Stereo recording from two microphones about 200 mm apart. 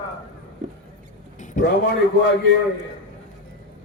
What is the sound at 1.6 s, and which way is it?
Speech, 60° left (ahead or behind).